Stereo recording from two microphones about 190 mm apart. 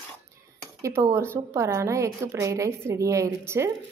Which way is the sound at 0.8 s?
15° right (ahead or behind).